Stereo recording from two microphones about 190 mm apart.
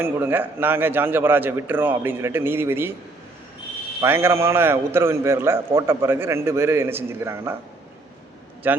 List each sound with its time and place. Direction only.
0.0 s a man's voice: 10° right (ahead or behind)
4.0 s a man's voice: 15° right (ahead or behind)
8.7 s a man's voice: 10° right (ahead or behind)